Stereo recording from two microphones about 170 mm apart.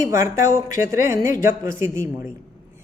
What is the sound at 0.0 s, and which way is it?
Speech, 15° right (ahead or behind).